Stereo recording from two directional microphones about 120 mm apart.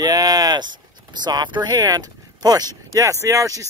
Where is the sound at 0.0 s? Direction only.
30° right (ahead or behind).